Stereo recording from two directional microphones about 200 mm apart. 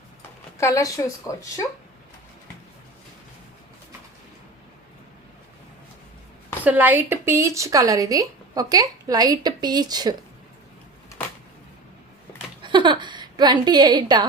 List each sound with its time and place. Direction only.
0.6 s speech: 15° left (ahead or behind)
6.7 s speech: 10° right (ahead or behind)
12.6 s a sound: 25° right (ahead or behind)